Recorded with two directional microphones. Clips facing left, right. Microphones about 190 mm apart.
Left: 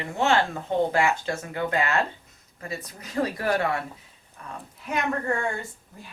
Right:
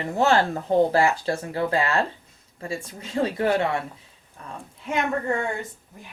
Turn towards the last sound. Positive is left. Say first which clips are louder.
# right 1 dB
turn(degrees=-25)  # may be behind; listen again after turning